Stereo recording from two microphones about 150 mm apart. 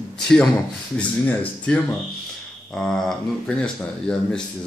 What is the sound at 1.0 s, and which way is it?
Speech, 10° left (ahead or behind).